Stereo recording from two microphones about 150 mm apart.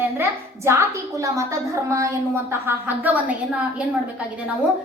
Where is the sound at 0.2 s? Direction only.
15° right (ahead or behind).